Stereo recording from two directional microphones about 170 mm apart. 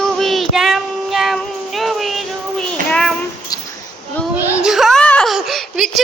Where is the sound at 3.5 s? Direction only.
20° left (ahead or behind).